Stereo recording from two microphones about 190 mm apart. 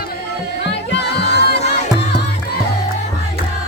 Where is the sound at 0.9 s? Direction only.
60° left (ahead or behind).